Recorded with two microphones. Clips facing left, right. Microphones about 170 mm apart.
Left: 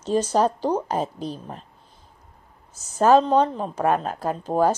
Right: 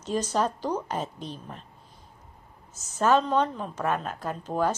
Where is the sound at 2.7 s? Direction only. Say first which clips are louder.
Left 6 dB; 35° left (ahead or behind).